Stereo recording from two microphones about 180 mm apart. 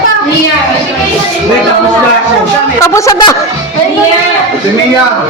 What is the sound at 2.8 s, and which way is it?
Speech, 20° left (ahead or behind).